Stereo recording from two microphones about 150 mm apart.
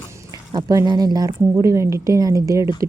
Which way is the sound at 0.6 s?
25° right (ahead or behind).